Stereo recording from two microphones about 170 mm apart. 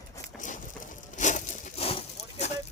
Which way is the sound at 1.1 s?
45° left (ahead or behind).